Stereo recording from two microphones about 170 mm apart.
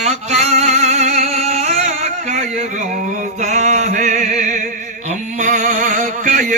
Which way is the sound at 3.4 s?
40° right (ahead or behind).